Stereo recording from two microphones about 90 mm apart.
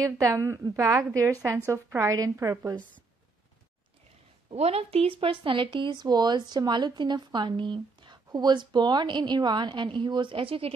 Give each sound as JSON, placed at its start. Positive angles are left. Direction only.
{"t": 0.8, "sound": "a woman's voice", "side_deg": -30}
{"t": 4.5, "sound": "a woman's voice", "side_deg": -90}